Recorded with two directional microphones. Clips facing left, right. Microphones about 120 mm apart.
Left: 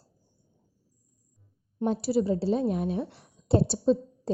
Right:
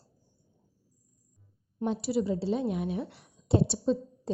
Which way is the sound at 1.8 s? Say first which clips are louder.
Left 3 dB; 40° left (ahead or behind).